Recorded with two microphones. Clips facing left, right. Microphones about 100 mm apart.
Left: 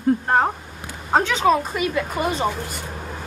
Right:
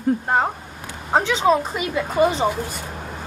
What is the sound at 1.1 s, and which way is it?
A woman's voice, 15° right (ahead or behind).